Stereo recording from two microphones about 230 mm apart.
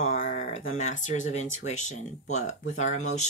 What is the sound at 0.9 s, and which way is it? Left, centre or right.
Speech, left.